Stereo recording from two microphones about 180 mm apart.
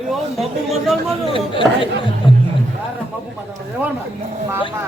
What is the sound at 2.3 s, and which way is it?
Music, 30° left (ahead or behind).